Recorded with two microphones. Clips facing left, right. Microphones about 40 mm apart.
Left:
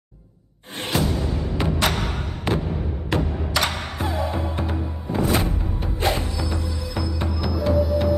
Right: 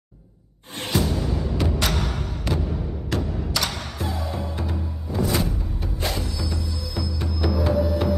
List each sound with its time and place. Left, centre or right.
1.6 s music: left
2.5 s a sound: left
3.1 s music: left
6.4 s music: left
7.3 s music: centre